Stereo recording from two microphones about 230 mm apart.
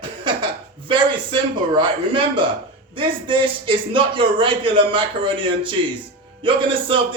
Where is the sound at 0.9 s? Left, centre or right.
Right.